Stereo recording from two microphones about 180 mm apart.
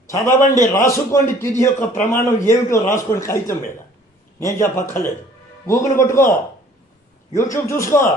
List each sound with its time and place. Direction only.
0.1 s a man's voice: 15° left (ahead or behind)
7.3 s a man's voice: 15° left (ahead or behind)